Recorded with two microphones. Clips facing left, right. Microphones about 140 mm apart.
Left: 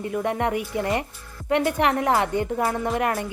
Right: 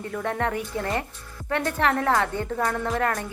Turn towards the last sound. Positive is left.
turn(degrees=10)  # may be behind; listen again after turning